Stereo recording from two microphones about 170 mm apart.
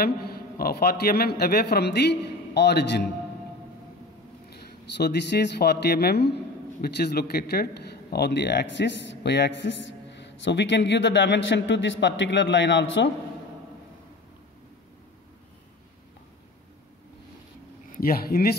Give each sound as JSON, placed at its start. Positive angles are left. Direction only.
{"t": 0.0, "sound": "a man's voice", "side_deg": 65}
{"t": 4.5, "sound": "speech", "side_deg": 75}
{"t": 17.9, "sound": "speech", "side_deg": 60}